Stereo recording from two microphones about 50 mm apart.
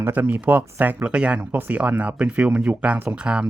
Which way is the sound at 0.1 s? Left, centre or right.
Right.